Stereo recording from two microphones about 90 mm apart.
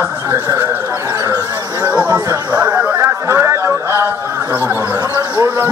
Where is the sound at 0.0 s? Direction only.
30° right (ahead or behind).